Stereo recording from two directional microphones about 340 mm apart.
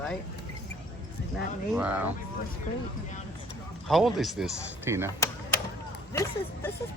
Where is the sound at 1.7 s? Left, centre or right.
Centre.